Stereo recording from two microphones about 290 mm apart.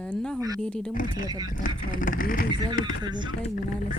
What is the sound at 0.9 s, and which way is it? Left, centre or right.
Speech, left.